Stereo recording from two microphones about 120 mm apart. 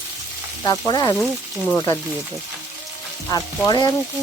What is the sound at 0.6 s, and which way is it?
Speech, 35° left (ahead or behind).